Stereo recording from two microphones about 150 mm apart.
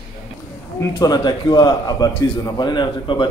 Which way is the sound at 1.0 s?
25° left (ahead or behind).